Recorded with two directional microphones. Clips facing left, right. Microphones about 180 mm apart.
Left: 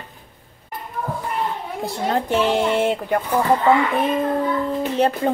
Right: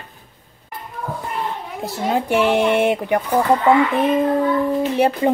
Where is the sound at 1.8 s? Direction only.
5° right (ahead or behind).